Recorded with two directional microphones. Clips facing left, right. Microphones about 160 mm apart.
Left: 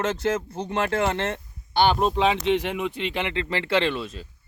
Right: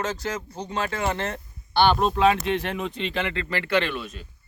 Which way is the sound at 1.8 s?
15° left (ahead or behind).